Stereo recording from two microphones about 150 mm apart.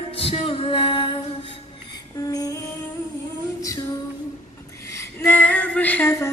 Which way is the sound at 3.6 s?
20° left (ahead or behind).